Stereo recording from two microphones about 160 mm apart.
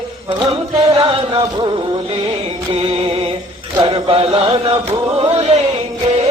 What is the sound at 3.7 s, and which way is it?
Chant, 35° right (ahead or behind).